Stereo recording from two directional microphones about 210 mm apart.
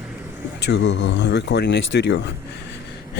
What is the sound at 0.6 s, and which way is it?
Speech, 55° left (ahead or behind).